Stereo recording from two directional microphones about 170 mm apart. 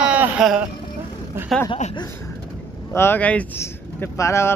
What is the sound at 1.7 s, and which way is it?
Speech, 30° left (ahead or behind).